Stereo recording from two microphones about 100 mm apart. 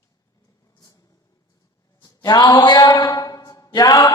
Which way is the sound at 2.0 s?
45° left (ahead or behind).